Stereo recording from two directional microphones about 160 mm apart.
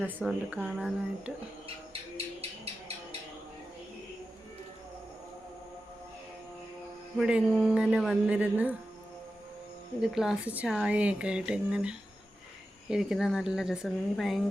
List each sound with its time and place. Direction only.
0.0 s a woman's voice: 10° right (ahead or behind)
1.6 s bird: 35° right (ahead or behind)
7.2 s speech: 5° right (ahead or behind)
10.0 s a woman's voice: 5° right (ahead or behind)